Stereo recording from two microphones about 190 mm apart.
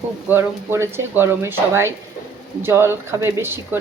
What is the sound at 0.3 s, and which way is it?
Speech, 10° right (ahead or behind).